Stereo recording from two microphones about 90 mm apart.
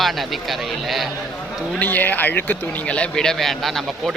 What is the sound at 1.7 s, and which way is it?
Speech, 20° left (ahead or behind).